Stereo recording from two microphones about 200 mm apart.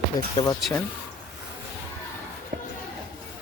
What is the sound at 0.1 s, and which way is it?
Speech, 20° left (ahead or behind).